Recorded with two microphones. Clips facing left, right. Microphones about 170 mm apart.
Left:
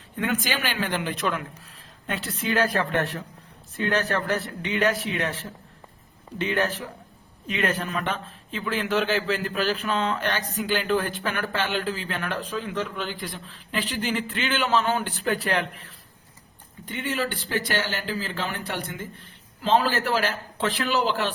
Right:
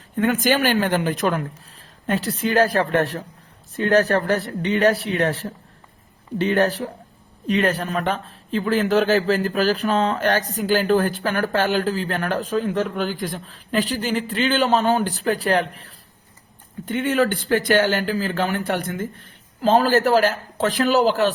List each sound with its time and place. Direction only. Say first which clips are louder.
0.4 s a man's voice: right 9 dB; 45° right (ahead or behind)
16.8 s speech: right 9 dB; 50° right (ahead or behind)